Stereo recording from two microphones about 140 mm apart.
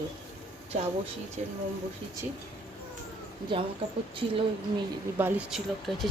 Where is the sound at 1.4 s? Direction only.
55° right (ahead or behind).